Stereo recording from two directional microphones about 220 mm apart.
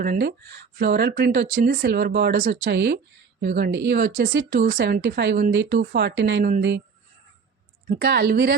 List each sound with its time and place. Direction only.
0.0 s speech: 45° right (ahead or behind)
7.9 s speech: 45° right (ahead or behind)